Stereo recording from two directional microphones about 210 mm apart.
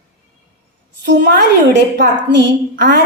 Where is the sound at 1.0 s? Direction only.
55° right (ahead or behind).